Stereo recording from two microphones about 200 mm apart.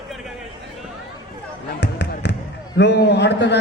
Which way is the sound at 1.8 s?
60° left (ahead or behind).